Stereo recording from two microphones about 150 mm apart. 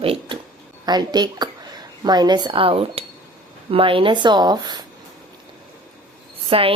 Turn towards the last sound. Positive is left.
turn(degrees=-40)  # may be behind; listen again after turning